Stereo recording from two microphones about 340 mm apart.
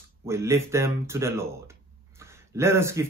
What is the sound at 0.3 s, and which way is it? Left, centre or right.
Speech, centre.